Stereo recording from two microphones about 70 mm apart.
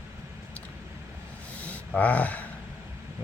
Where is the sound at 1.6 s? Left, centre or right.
Centre.